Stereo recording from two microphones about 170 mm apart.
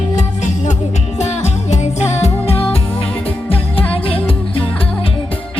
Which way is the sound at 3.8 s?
35° left (ahead or behind).